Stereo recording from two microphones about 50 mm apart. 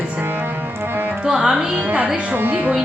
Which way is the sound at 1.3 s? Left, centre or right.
Centre.